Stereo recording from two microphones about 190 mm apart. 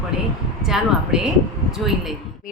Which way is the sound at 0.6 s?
Centre (ahead or behind).